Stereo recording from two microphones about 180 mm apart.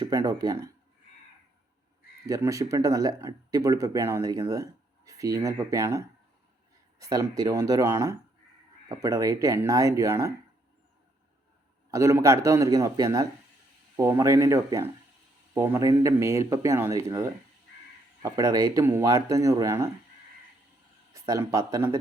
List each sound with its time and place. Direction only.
0.0 s speech: 20° right (ahead or behind)
2.2 s speech: 20° right (ahead or behind)
11.9 s speech: 15° right (ahead or behind)
21.1 s speech: 20° right (ahead or behind)